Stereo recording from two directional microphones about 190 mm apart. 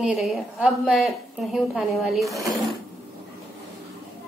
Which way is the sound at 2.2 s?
15° right (ahead or behind).